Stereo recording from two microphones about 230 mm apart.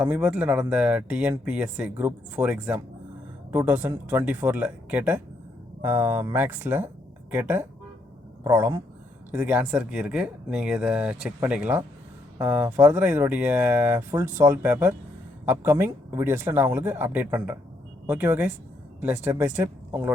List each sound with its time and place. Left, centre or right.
0.0 s speech: centre